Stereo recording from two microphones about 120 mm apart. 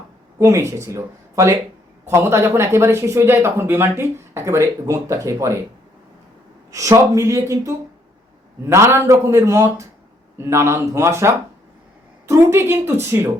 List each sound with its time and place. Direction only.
0.3 s speech: 25° right (ahead or behind)
6.7 s speech: 25° right (ahead or behind)